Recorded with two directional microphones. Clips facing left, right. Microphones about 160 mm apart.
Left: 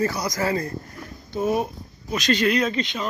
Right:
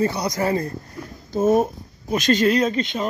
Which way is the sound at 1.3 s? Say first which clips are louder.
Right 5 dB; 45° right (ahead or behind).